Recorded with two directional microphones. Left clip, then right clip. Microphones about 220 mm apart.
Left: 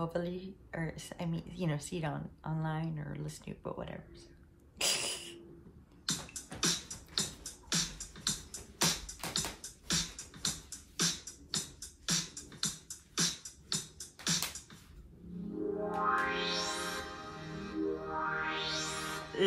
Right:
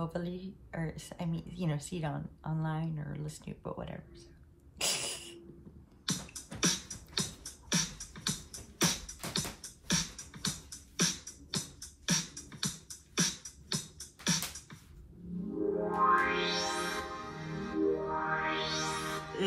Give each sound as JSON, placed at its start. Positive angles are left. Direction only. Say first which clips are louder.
{"t": 0.0, "sound": "a woman's voice", "louder": "left 2 dB", "side_deg": 0}
{"t": 4.7, "sound": "a sound", "louder": "left 1 dB", "side_deg": 0}
{"t": 6.0, "sound": "music", "louder": "even", "side_deg": -30}
{"t": 16.0, "sound": "music", "louder": "right 5 dB", "side_deg": -30}